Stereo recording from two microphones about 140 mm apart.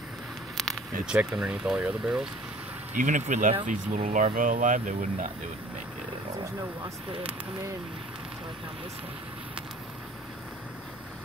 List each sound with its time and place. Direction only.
0.6 s speech: centre (ahead or behind)
3.0 s speech: 60° right (ahead or behind)